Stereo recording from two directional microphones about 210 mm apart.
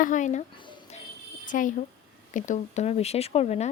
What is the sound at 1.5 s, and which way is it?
Speech, 35° left (ahead or behind).